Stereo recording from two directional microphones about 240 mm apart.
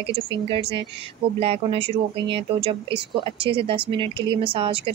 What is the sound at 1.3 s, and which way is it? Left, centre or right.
A woman's voice, right.